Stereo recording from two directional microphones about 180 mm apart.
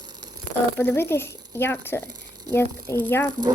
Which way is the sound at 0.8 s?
10° left (ahead or behind).